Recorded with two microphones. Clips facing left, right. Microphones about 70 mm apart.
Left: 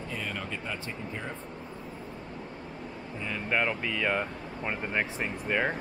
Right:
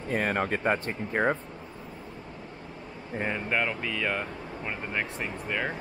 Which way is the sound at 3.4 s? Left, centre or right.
Centre.